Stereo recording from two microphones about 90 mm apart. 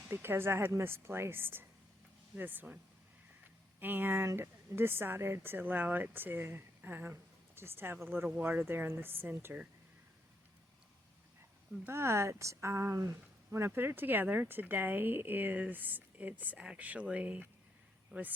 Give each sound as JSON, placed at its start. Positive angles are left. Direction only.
{"t": 0.1, "sound": "speech", "side_deg": -25}
{"t": 3.8, "sound": "speech", "side_deg": -20}
{"t": 11.9, "sound": "speech", "side_deg": -30}